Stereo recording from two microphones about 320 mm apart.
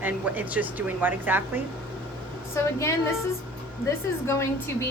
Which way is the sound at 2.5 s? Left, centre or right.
Centre.